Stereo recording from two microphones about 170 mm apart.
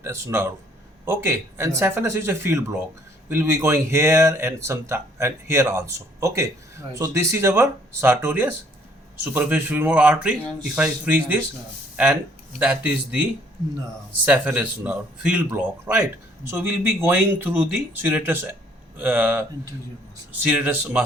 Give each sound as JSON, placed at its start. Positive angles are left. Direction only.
{"t": 0.0, "sound": "speech", "side_deg": -15}
{"t": 12.5, "sound": "speech", "side_deg": -10}
{"t": 14.3, "sound": "speech", "side_deg": -10}